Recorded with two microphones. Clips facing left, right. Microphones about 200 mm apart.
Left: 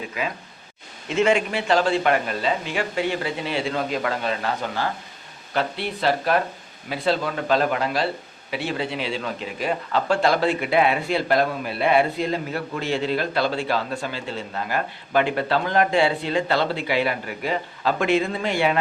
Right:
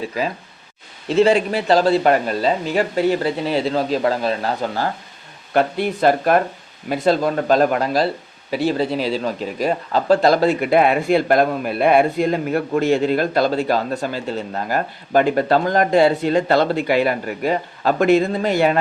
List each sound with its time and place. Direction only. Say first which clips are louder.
0.2 s speech: right 5 dB; 35° right (ahead or behind)
5.5 s speech: right 7 dB; 45° right (ahead or behind)